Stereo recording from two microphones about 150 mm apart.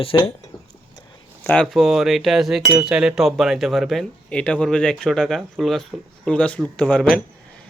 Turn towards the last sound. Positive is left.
turn(degrees=5)  # may be behind; listen again after turning